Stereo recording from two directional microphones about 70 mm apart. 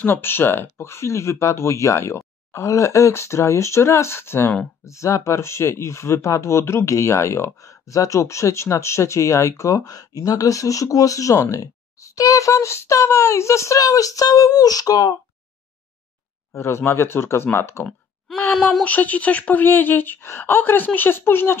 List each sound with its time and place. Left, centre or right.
0.0 s speech: left
4.8 s speech: left
16.5 s speech: left
18.5 s speech: centre
18.9 s speech: left